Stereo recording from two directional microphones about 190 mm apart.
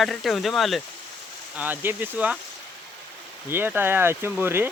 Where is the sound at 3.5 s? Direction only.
10° right (ahead or behind).